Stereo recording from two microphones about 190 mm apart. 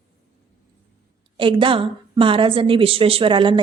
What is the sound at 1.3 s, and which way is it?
A woman's voice, 25° right (ahead or behind).